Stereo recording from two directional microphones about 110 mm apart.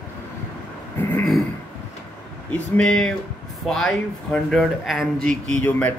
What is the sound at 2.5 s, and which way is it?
Speech, 10° left (ahead or behind).